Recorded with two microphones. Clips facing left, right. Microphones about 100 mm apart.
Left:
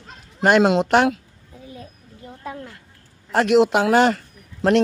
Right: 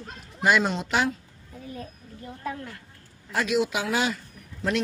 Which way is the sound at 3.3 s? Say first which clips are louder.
Left 9 dB; 65° left (ahead or behind).